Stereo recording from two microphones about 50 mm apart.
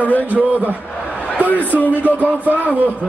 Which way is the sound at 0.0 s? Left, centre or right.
Left.